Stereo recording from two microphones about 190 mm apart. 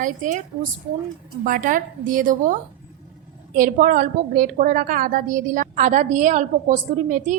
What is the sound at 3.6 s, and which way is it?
A woman's voice, 45° right (ahead or behind).